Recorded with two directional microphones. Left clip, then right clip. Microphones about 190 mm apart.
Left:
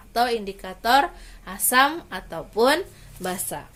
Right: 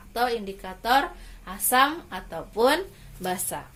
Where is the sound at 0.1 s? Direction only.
45° left (ahead or behind); by 3.6 s 30° left (ahead or behind).